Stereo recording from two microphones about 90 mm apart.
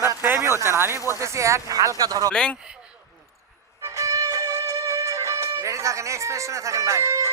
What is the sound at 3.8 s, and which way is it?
Music, 35° right (ahead or behind).